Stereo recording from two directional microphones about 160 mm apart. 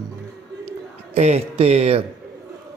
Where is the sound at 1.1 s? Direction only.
45° right (ahead or behind).